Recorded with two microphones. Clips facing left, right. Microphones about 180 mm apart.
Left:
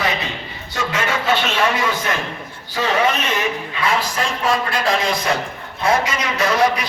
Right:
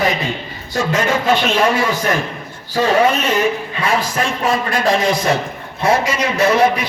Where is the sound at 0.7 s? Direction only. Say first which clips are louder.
Right 5 dB; 45° right (ahead or behind).